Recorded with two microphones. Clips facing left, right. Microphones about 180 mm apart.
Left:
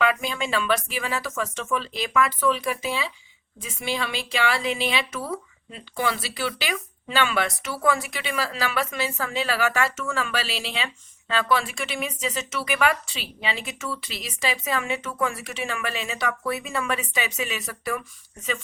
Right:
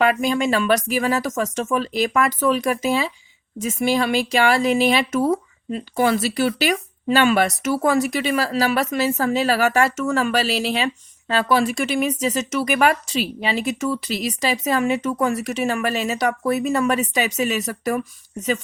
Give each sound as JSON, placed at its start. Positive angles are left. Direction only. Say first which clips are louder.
{"t": 0.0, "sound": "speech", "louder": "right 6 dB", "side_deg": -45}